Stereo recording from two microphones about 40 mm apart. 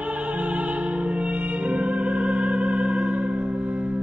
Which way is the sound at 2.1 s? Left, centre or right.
Right.